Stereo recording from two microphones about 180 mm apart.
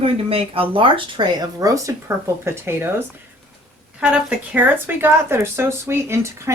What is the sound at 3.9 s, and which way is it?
Speech, 5° right (ahead or behind).